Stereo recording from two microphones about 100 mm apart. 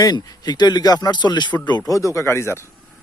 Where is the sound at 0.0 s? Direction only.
40° left (ahead or behind).